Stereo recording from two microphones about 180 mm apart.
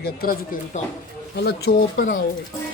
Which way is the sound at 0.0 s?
60° left (ahead or behind).